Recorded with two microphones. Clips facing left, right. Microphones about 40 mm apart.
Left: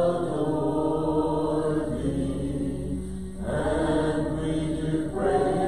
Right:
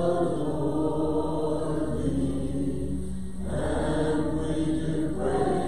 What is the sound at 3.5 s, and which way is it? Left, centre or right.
Mantra, left.